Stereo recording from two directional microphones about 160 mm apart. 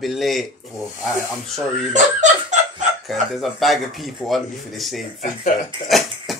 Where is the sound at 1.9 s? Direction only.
50° right (ahead or behind).